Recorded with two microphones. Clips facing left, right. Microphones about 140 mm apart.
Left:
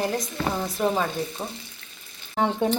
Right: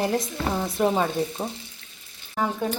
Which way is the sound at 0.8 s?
15° right (ahead or behind).